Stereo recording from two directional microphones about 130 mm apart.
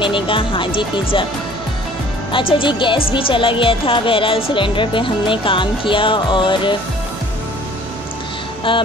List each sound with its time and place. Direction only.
0.0 s speech: 40° left (ahead or behind)
2.3 s speech: 40° left (ahead or behind)
8.7 s speech: 40° left (ahead or behind)